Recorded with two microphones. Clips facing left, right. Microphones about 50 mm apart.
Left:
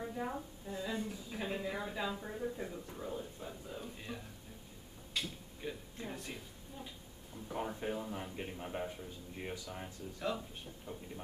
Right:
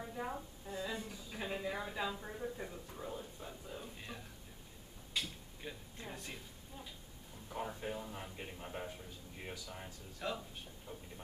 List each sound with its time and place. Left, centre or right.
0.0 s a woman's voice: centre
5.1 s a sound: centre
7.4 s a man's voice: centre
10.9 s speech: left